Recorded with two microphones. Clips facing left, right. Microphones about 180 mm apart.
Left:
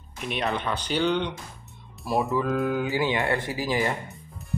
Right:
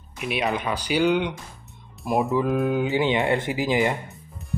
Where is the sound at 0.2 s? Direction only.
10° right (ahead or behind).